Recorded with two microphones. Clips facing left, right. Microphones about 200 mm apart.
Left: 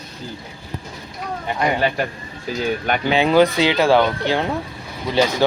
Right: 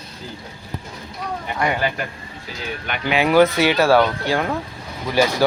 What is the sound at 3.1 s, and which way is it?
Speech, 25° left (ahead or behind).